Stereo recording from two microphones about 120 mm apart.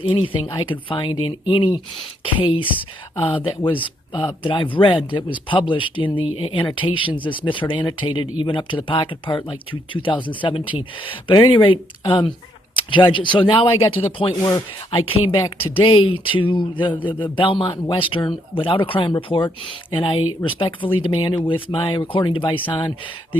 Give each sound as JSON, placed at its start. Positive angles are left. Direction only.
{"t": 0.0, "sound": "speech", "side_deg": 50}